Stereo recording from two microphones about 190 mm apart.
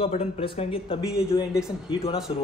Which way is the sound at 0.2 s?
30° left (ahead or behind).